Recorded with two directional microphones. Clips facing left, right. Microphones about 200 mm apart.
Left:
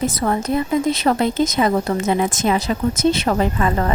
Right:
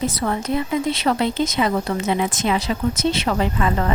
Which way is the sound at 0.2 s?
45° left (ahead or behind).